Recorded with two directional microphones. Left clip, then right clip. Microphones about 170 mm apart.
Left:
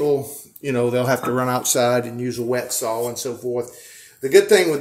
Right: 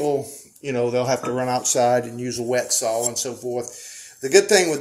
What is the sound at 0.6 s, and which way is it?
Speech, 25° left (ahead or behind).